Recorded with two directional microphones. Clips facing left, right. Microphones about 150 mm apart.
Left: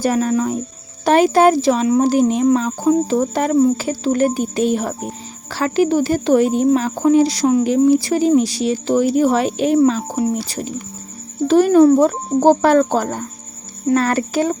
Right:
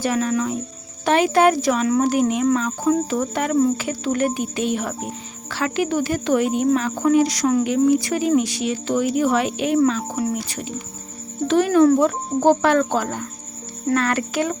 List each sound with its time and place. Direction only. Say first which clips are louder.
0.0 s a woman's voice: left 4 dB; 40° left (ahead or behind)